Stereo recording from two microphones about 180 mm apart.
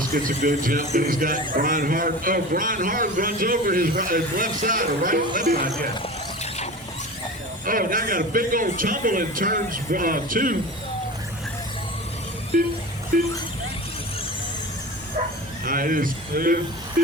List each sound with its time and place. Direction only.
0.1 s speech: 50° right (ahead or behind)
6.0 s vehicle: 40° left (ahead or behind)
7.6 s speech: 50° right (ahead or behind)
13.1 s speech: 50° right (ahead or behind)
15.6 s speech: 50° right (ahead or behind)